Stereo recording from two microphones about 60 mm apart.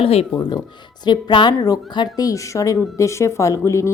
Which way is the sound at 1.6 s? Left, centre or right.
Left.